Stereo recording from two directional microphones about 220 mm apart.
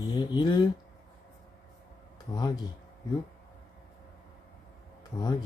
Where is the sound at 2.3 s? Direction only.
15° left (ahead or behind).